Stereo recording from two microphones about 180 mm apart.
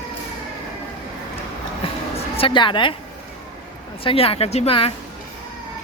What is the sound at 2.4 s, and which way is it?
Speech, 30° left (ahead or behind).